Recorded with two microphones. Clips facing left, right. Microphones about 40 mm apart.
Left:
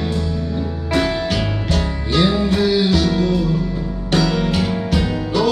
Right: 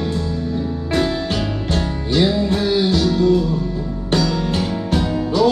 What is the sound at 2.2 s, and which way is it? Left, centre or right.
Music, left.